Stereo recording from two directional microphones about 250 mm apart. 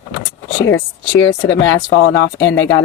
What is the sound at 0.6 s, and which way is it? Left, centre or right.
Speech, left.